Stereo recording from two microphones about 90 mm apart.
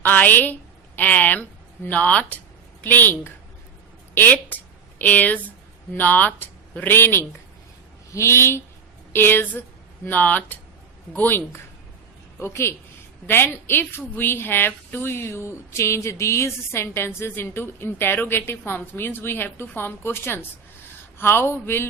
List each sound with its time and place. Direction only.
0.0 s a woman's voice: 20° left (ahead or behind)
4.1 s a sound: 20° left (ahead or behind)
5.9 s a woman's voice: 20° left (ahead or behind)